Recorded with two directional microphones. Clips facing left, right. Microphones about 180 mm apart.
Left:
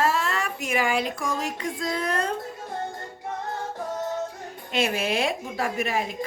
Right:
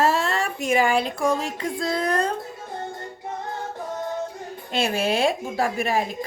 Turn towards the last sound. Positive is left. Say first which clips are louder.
# right 3 dB
turn(degrees=-35)  # may be behind; listen again after turning